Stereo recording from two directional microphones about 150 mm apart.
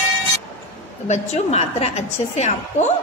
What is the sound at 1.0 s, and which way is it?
A woman's voice, 45° left (ahead or behind).